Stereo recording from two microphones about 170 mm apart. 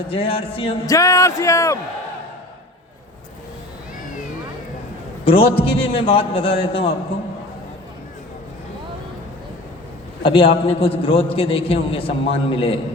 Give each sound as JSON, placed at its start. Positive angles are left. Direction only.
{"t": 0.1, "sound": "a man's voice", "side_deg": 35}
{"t": 0.9, "sound": "speech", "side_deg": 20}
{"t": 5.2, "sound": "a man's voice", "side_deg": 35}
{"t": 10.2, "sound": "a man's voice", "side_deg": 30}